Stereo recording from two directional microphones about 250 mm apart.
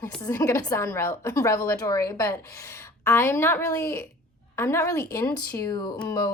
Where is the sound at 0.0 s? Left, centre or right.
Centre.